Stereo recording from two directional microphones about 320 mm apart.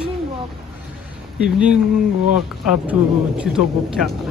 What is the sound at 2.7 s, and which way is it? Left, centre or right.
Speech, centre.